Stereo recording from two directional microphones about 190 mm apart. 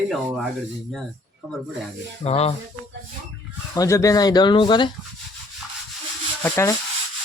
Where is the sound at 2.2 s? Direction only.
35° left (ahead or behind).